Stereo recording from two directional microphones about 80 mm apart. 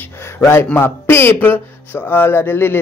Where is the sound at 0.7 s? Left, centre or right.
Left.